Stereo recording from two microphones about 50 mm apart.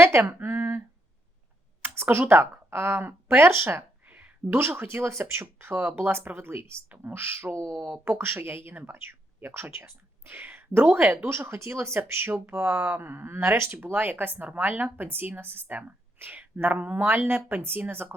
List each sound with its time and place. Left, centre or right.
0.0 s a sound: right
1.8 s a sound: right
2.3 s speech: right
7.5 s speech: right
8.0 s speech: right
13.9 s speech: right